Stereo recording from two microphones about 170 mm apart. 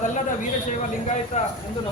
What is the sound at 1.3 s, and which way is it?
Speech, 45° left (ahead or behind).